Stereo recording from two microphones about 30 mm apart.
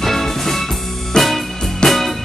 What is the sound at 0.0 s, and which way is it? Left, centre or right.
Music, centre.